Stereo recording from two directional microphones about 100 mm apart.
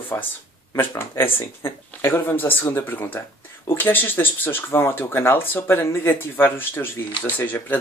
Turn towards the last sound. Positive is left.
turn(degrees=20)  # may be behind; listen again after turning